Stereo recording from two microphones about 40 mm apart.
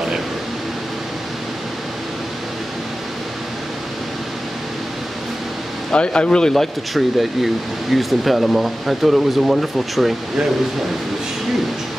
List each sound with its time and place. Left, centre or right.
5.9 s speech: left
6.5 s speech: centre